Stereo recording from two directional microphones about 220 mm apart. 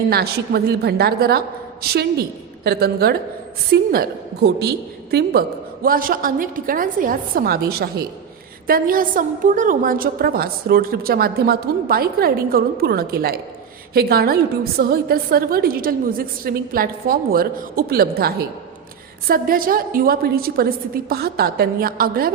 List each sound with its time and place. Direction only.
0.1 s a woman's voice: 45° right (ahead or behind)